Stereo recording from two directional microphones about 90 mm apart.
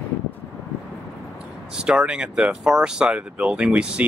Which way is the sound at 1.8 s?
10° right (ahead or behind).